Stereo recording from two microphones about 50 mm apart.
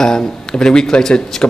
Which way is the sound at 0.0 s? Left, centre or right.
Centre.